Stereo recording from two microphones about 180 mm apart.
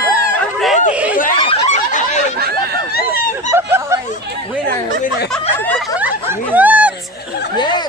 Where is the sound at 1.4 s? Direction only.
35° left (ahead or behind).